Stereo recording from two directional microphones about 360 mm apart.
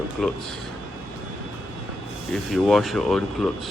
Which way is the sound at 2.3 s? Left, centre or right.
Centre.